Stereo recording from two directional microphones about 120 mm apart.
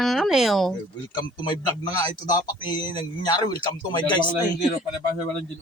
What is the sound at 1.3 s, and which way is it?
A man's voice, 35° left (ahead or behind).